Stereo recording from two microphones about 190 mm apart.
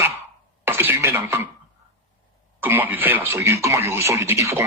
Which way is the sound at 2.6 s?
10° right (ahead or behind).